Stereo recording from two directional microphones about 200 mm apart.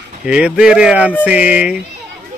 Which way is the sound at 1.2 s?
5° right (ahead or behind).